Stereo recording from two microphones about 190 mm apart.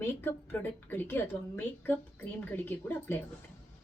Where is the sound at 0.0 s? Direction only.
10° left (ahead or behind).